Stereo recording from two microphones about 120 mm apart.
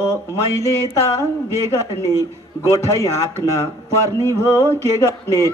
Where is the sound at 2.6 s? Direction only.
25° left (ahead or behind).